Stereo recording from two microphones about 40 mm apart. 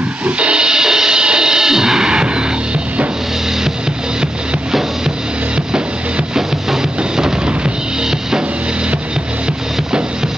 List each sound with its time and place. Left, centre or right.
0.2 s music: right
5.7 s drum kit: centre
7.0 s music: right